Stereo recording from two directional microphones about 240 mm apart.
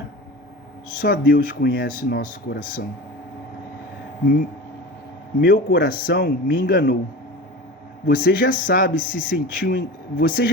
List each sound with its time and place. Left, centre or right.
1.0 s speech: left
5.4 s a man's voice: left
8.0 s speech: left